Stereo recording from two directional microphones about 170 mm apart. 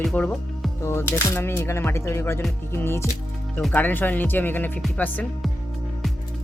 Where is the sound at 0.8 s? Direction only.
15° left (ahead or behind).